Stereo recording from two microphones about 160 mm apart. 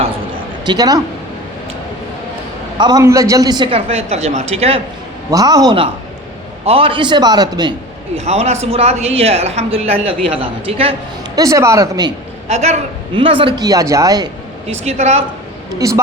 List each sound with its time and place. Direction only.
0.6 s speech: 25° right (ahead or behind)
2.7 s a man's voice: 30° right (ahead or behind)
5.3 s a man's voice: 20° right (ahead or behind)
8.1 s a man's voice: 40° right (ahead or behind)
11.3 s a man's voice: 20° right (ahead or behind)
12.5 s a man's voice: 45° right (ahead or behind)
13.6 s a man's voice: 20° right (ahead or behind)
14.7 s a woman's voice: 45° right (ahead or behind)
15.8 s a man's voice: 20° right (ahead or behind)